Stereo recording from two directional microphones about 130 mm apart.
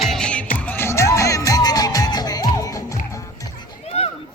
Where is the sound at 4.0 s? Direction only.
50° left (ahead or behind).